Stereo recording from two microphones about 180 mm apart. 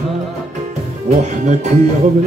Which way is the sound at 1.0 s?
40° right (ahead or behind).